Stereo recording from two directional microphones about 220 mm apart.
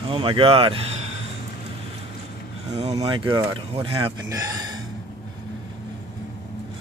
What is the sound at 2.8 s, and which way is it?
Speech, 30° right (ahead or behind).